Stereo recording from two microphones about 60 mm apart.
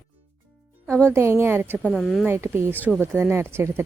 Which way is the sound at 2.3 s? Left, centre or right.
Right.